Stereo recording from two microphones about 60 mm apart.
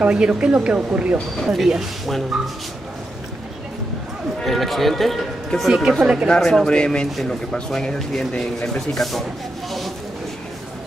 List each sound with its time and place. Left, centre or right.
0.0 s a woman's voice: centre
1.4 s speech: centre
4.4 s speech: centre
5.9 s a woman's voice: centre
6.2 s speech: centre
9.7 s a sound: centre